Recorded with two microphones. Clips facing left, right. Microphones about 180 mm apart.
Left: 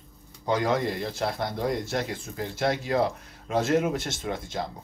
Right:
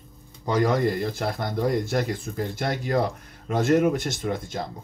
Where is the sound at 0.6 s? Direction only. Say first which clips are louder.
Right 7 dB; 50° right (ahead or behind).